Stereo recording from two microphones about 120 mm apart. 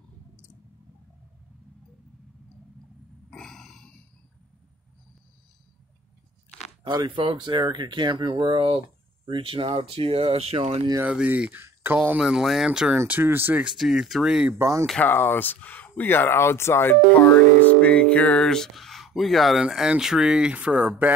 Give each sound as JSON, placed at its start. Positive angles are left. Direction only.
{"t": 3.3, "sound": "a sound", "side_deg": 5}
{"t": 6.8, "sound": "speech", "side_deg": -40}
{"t": 11.0, "sound": "speech", "side_deg": -10}
{"t": 12.2, "sound": "speech", "side_deg": -5}
{"t": 13.7, "sound": "speech", "side_deg": -5}
{"t": 14.6, "sound": "speech", "side_deg": -25}
{"t": 15.0, "sound": "speech", "side_deg": 15}